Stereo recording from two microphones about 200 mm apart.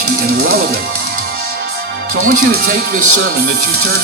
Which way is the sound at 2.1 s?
50° right (ahead or behind).